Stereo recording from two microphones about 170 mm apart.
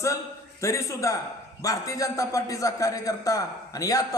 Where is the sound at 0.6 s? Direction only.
20° left (ahead or behind).